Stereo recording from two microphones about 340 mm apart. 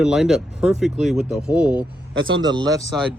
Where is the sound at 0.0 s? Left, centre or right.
Centre.